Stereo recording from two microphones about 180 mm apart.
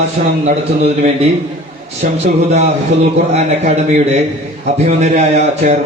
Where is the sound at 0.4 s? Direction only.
40° right (ahead or behind).